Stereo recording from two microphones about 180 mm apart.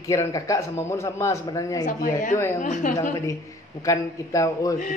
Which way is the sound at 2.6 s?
45° left (ahead or behind).